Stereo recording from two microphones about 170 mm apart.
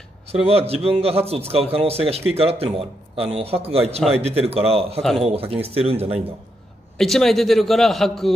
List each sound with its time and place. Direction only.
0.3 s speech: 35° right (ahead or behind)
7.0 s a man's voice: centre (ahead or behind)